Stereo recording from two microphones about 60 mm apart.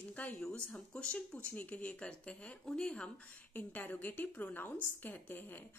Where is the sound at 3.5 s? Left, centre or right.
Left.